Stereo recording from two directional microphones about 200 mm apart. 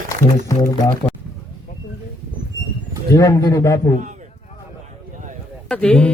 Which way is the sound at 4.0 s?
40° right (ahead or behind).